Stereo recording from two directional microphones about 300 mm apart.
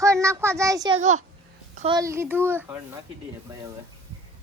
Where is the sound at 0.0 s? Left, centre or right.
Centre.